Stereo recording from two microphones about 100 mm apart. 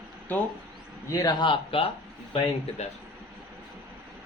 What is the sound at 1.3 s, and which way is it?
Speech, 60° left (ahead or behind).